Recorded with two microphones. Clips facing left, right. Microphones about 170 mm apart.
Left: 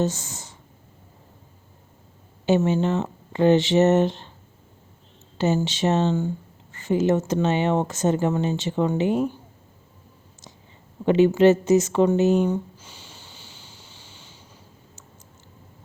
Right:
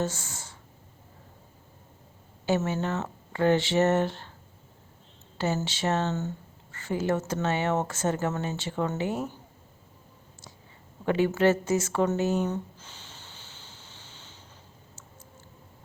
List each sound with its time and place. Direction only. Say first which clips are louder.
0.0 s speech: left 6 dB; 20° left (ahead or behind)
2.5 s speech: left 7 dB; 20° left (ahead or behind)
5.4 s speech: left 7 dB; 20° left (ahead or behind)
11.0 s a sound: left 7 dB; 20° left (ahead or behind)